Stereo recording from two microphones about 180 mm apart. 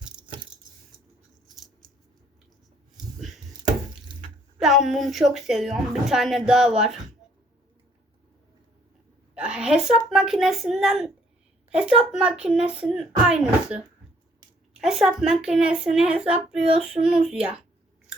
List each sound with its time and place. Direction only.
3.2 s chopping: centre (ahead or behind)
4.1 s water: 25° right (ahead or behind)
4.6 s a woman's voice: centre (ahead or behind)
9.3 s a sound: 5° right (ahead or behind)
10.1 s a woman's voice: centre (ahead or behind)